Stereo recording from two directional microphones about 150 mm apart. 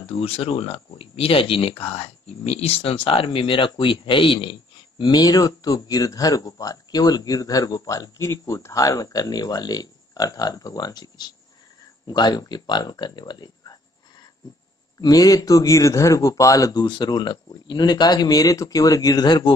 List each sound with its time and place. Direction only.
0.0 s speech: 40° left (ahead or behind)
15.0 s speech: 25° left (ahead or behind)